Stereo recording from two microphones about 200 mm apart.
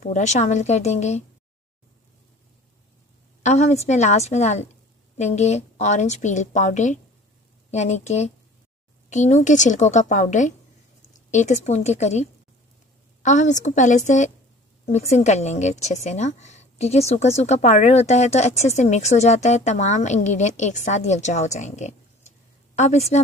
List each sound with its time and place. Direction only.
0.0 s a woman's voice: 35° left (ahead or behind)
3.4 s a woman's voice: 35° left (ahead or behind)